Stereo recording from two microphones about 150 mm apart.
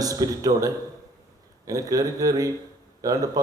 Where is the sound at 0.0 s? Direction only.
25° right (ahead or behind).